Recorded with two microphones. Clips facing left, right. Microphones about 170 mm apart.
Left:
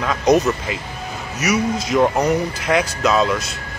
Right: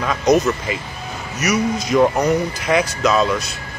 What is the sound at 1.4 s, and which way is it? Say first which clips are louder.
A man's voice: even; 5° left (ahead or behind).